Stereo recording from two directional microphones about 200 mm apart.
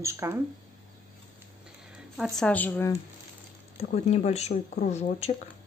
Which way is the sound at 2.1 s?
Centre (ahead or behind).